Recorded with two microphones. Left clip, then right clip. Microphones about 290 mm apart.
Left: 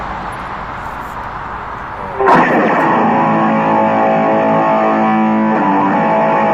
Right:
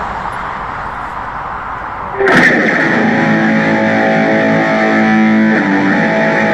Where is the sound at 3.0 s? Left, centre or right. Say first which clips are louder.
Even; right.